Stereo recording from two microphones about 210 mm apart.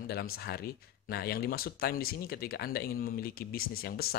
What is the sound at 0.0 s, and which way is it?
Speech, 45° left (ahead or behind).